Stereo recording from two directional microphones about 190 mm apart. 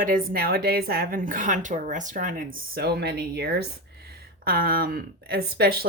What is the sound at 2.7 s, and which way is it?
Speech, 55° right (ahead or behind).